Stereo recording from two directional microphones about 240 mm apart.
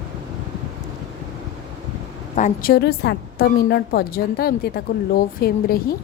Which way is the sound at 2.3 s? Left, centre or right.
Left.